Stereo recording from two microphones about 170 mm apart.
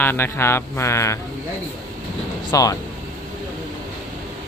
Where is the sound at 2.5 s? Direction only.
20° left (ahead or behind).